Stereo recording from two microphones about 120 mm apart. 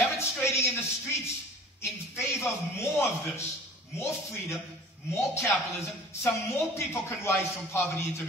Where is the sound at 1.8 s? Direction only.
20° left (ahead or behind).